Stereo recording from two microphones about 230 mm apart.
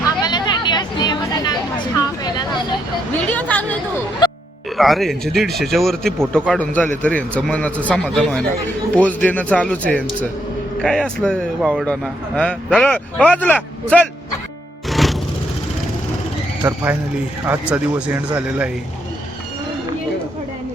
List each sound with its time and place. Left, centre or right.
0.2 s chatter: centre
2.0 s vehicle: centre
3.2 s a woman's voice: centre
4.2 s music: centre
4.8 s a man's voice: centre
14.8 s music: centre
16.6 s speech: centre